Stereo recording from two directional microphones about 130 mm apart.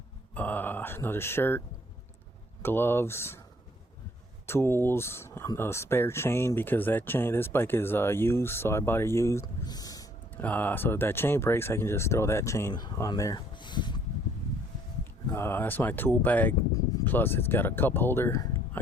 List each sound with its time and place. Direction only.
0.3 s speech: 15° left (ahead or behind)
4.4 s speech: 20° left (ahead or behind)
10.3 s speech: 10° left (ahead or behind)
12.7 s speech: 35° left (ahead or behind)
13.6 s a sound: 35° left (ahead or behind)
15.3 s speech: 20° left (ahead or behind)